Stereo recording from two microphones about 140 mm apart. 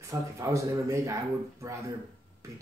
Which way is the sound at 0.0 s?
20° right (ahead or behind).